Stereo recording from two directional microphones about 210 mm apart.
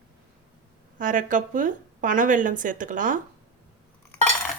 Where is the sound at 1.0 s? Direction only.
40° right (ahead or behind).